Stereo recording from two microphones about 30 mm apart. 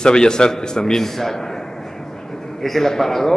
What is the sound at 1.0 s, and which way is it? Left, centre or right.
A man's voice, centre.